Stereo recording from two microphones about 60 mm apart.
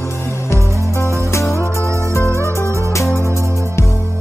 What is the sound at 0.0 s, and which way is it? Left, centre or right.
Music, left.